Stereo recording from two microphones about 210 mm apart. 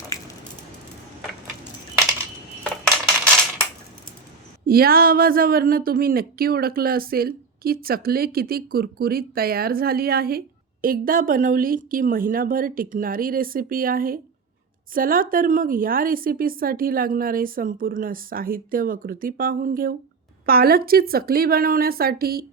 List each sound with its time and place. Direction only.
4.6 s speech: 45° right (ahead or behind)